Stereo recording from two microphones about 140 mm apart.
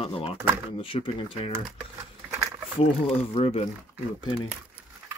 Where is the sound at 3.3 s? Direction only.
45° left (ahead or behind).